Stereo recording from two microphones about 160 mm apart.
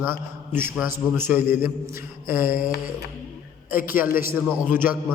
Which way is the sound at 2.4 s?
60° left (ahead or behind).